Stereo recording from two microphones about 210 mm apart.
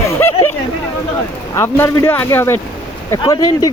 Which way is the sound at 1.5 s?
10° left (ahead or behind).